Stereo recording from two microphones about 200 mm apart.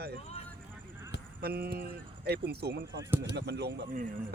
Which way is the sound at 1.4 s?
50° right (ahead or behind).